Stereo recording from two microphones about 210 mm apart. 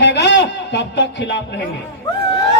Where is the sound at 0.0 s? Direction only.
55° left (ahead or behind).